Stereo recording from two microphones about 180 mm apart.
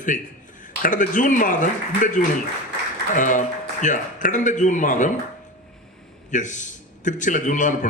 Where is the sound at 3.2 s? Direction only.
45° left (ahead or behind).